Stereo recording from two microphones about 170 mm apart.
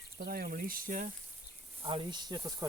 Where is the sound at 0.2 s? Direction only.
60° right (ahead or behind).